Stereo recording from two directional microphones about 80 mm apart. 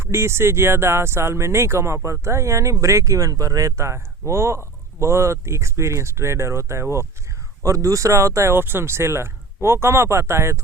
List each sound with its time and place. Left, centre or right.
0.0 s speech: right